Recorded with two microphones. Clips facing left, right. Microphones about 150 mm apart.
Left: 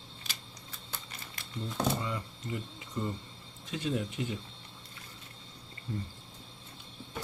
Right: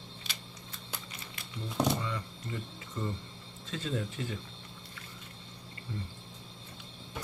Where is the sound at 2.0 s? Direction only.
20° left (ahead or behind).